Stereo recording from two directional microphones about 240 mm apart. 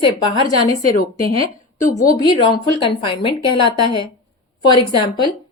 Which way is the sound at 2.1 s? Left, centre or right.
Centre.